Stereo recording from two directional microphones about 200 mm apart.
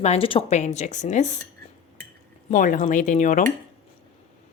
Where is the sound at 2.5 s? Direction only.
40° left (ahead or behind).